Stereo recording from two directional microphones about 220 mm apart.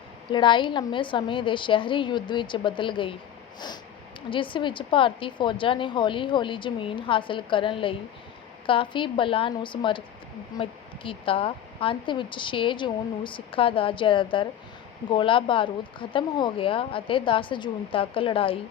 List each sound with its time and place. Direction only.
0.3 s speech: 20° left (ahead or behind)
4.3 s speech: 25° left (ahead or behind)